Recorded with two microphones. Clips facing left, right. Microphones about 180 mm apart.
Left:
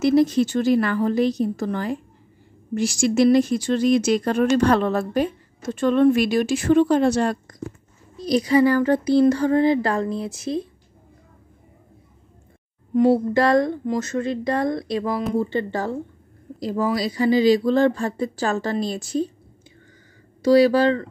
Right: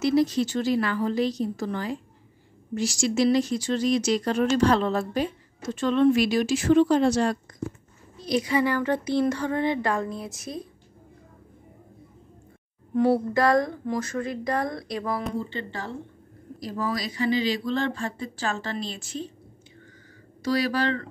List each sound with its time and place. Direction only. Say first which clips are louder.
0.0 s a woman's voice: left 5 dB; 50° left (ahead or behind)
8.3 s speech: left 7 dB; 35° left (ahead or behind)
12.9 s speech: left 5 dB; 20° left (ahead or behind)
15.3 s a woman's voice: left 9 dB; 40° left (ahead or behind)
16.5 s speech: left 7 dB; 25° left (ahead or behind); by 19.2 s 40° left (ahead or behind)
20.4 s speech: left 9 dB; 30° left (ahead or behind)